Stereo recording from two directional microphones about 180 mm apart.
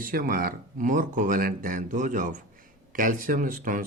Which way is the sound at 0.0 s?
50° right (ahead or behind).